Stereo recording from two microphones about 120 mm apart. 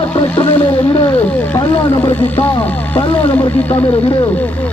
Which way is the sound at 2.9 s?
10° left (ahead or behind).